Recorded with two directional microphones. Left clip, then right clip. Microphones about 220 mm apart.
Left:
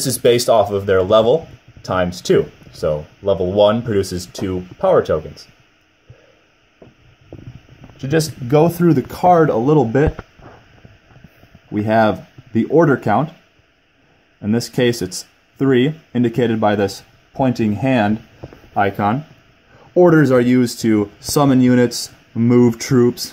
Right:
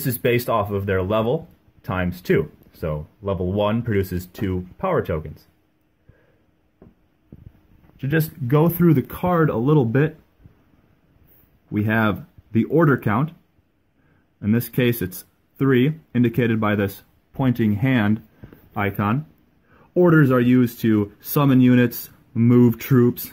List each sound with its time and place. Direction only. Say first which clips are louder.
0.2 s speech: left 8 dB; 15° right (ahead or behind)
8.0 s speech: left 5 dB; 20° right (ahead or behind)
11.7 s speech: left 7 dB; 20° right (ahead or behind)
14.4 s speech: left 5 dB; 20° right (ahead or behind)